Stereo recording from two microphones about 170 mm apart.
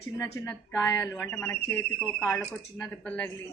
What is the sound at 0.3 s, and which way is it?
Speech, 15° left (ahead or behind).